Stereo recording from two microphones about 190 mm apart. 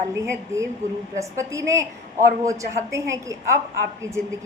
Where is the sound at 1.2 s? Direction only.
15° right (ahead or behind).